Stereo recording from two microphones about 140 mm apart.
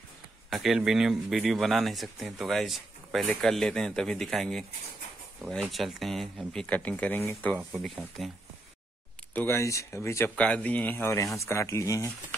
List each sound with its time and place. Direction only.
0.5 s speech: centre (ahead or behind)
7.5 s speech: centre (ahead or behind)
9.3 s speech: 15° left (ahead or behind)